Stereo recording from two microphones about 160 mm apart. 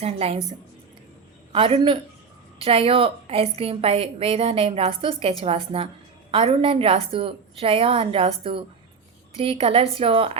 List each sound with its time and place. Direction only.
0.0 s a woman's voice: 40° right (ahead or behind)
1.5 s a woman's voice: 35° right (ahead or behind)